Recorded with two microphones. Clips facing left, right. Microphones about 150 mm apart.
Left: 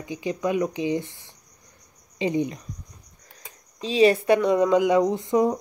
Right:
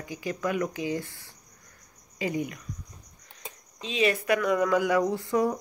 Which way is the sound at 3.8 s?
35° left (ahead or behind).